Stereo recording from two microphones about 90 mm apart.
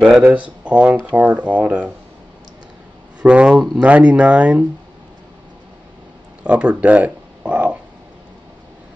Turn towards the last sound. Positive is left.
turn(degrees=-15)  # may be behind; listen again after turning